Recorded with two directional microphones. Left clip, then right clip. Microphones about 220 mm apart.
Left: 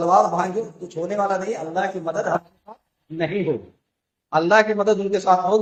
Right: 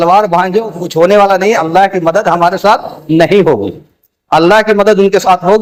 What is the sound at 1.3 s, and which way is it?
Speech, 50° right (ahead or behind).